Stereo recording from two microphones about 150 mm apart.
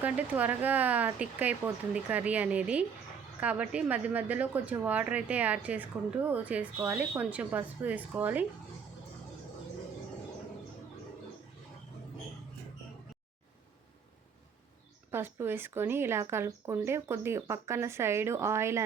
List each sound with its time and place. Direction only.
0.0 s a woman's voice: 10° right (ahead or behind)
15.1 s a woman's voice: 15° right (ahead or behind)